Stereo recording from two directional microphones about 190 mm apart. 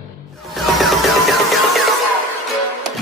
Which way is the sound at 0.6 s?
Centre (ahead or behind).